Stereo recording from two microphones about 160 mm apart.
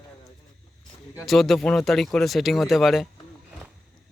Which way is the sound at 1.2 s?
Centre (ahead or behind).